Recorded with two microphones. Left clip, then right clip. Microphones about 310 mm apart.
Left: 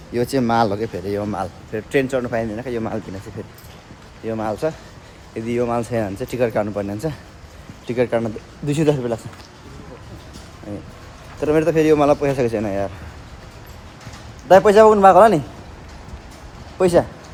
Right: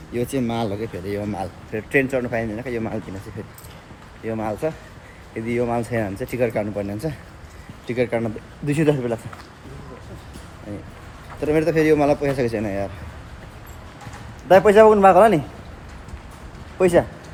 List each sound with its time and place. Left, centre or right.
0.1 s speech: left
4.3 s a man's voice: centre
11.3 s speech: centre
14.4 s a man's voice: centre
16.7 s a man's voice: centre